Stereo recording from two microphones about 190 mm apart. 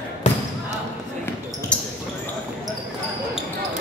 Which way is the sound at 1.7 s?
5° left (ahead or behind).